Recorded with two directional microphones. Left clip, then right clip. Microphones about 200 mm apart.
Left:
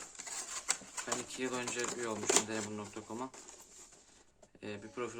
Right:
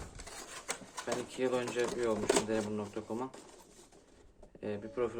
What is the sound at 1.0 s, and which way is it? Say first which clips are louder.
Speech: right 5 dB; 20° left (ahead or behind).